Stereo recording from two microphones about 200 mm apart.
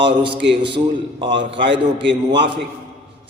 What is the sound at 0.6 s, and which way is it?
A man's voice, 25° right (ahead or behind).